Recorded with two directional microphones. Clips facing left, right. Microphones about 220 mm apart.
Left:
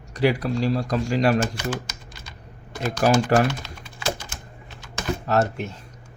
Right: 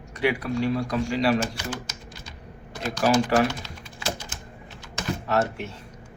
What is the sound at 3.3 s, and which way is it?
Speech, 45° left (ahead or behind).